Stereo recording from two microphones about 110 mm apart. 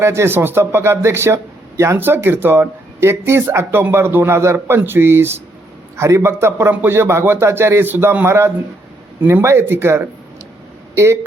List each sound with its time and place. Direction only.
0.0 s a man's voice: 25° right (ahead or behind)